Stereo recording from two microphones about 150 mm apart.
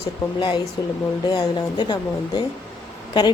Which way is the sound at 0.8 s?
25° left (ahead or behind).